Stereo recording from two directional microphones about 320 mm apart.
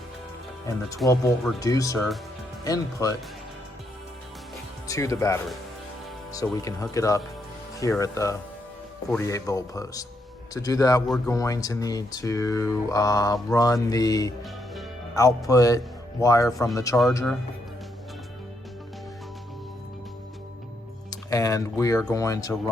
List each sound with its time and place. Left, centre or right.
0.9 s speech: centre
4.9 s speech: centre
15.4 s speech: centre
21.1 s speech: centre